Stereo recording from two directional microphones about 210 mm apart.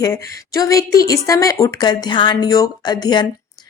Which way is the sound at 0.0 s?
15° left (ahead or behind).